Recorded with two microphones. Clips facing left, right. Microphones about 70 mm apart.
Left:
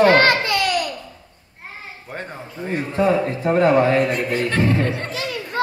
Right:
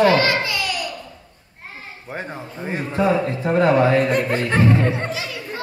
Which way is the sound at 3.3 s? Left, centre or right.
Left.